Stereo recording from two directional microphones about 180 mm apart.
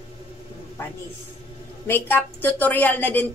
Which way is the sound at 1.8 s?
10° left (ahead or behind).